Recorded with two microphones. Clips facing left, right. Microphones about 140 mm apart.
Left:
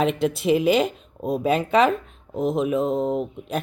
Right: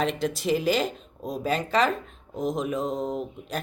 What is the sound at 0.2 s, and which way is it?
Speech, 5° left (ahead or behind).